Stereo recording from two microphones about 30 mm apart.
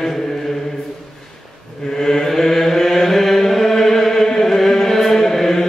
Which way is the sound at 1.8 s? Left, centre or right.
Centre.